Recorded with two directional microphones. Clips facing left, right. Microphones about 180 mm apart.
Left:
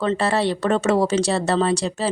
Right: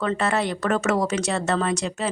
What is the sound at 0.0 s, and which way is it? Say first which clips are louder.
Speech: left 3 dB; 30° left (ahead or behind).